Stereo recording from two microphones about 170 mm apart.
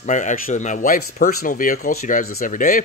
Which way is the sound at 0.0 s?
45° left (ahead or behind).